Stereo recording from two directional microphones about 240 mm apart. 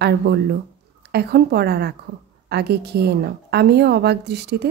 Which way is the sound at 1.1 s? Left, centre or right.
Right.